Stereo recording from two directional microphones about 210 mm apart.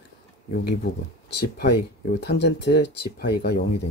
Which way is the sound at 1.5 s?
50° left (ahead or behind).